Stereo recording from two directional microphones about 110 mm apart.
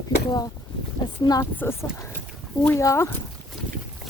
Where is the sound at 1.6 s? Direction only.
20° left (ahead or behind).